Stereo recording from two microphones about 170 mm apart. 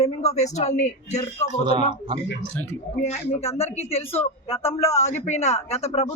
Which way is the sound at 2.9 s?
40° left (ahead or behind).